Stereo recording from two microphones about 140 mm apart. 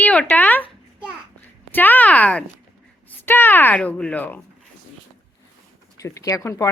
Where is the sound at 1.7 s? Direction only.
15° left (ahead or behind).